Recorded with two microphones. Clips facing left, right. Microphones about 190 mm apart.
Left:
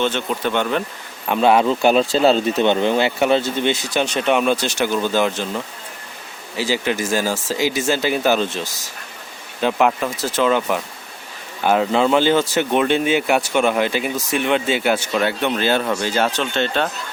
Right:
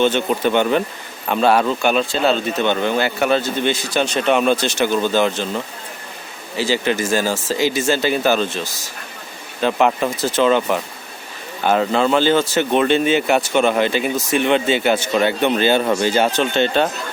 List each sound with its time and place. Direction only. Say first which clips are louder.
0.0 s speech: right 4 dB; centre (ahead or behind)
1.3 s speech: left 1 dB; 15° left (ahead or behind)
1.8 s speech: left 3 dB; 35° left (ahead or behind)
9.6 s speech: right 1 dB; 10° left (ahead or behind)